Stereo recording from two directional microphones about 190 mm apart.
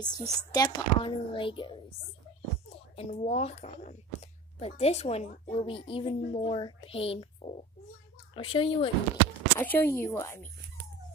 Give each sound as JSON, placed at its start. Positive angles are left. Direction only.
{"t": 0.0, "sound": "speech", "side_deg": 20}
{"t": 3.0, "sound": "speech", "side_deg": 35}
{"t": 9.6, "sound": "speech", "side_deg": 10}